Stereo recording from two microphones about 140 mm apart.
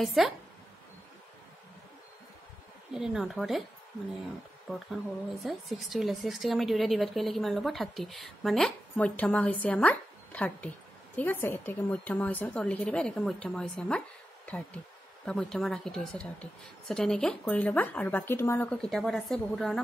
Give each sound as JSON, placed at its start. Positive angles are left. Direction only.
{"t": 0.0, "sound": "a woman's voice", "side_deg": 0}
{"t": 2.9, "sound": "a woman's voice", "side_deg": -5}
{"t": 4.7, "sound": "a woman's voice", "side_deg": 0}
{"t": 18.7, "sound": "a woman's voice", "side_deg": 5}